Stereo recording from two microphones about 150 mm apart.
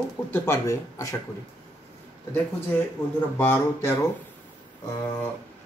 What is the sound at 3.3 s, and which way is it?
Speech, 15° left (ahead or behind).